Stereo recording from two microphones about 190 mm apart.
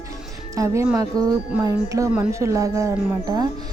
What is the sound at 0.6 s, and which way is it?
A woman's voice, 10° right (ahead or behind).